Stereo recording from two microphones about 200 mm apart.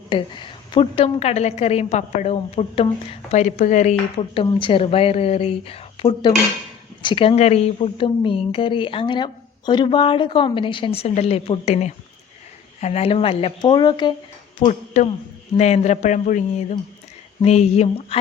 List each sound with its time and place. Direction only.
0.1 s a woman's voice: 25° left (ahead or behind)
14.6 s a man's voice: 35° left (ahead or behind)